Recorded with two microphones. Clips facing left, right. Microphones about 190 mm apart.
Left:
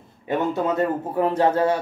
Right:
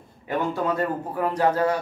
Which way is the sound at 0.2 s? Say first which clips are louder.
Left 3 dB; 20° left (ahead or behind).